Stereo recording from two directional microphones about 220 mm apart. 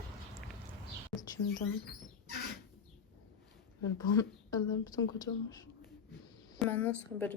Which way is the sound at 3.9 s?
15° left (ahead or behind).